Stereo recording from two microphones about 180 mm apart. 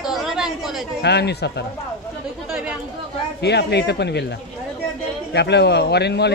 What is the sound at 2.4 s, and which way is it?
Speech, 5° right (ahead or behind).